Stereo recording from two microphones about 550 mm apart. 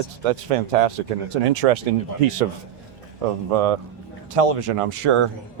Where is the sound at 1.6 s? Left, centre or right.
Right.